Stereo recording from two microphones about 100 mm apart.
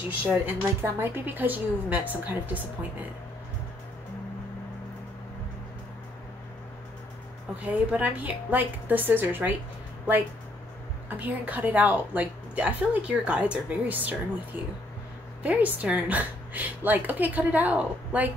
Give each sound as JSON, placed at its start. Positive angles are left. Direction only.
{"t": 0.3, "sound": "a woman's voice", "side_deg": -20}
{"t": 7.6, "sound": "a woman's voice", "side_deg": -15}
{"t": 11.1, "sound": "a woman's voice", "side_deg": -15}